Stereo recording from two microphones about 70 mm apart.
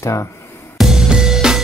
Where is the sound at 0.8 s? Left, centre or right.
Centre.